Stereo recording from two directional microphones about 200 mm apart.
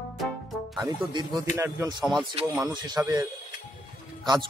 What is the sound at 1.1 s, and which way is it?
Speech, 20° right (ahead or behind).